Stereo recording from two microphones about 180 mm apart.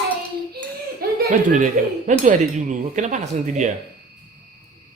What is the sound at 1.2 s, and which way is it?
Speech, 45° right (ahead or behind).